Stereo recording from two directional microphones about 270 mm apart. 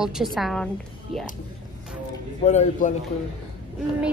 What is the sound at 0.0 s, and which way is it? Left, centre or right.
Speech, centre.